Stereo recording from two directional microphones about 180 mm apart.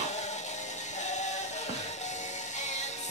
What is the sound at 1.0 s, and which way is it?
Music, 40° left (ahead or behind).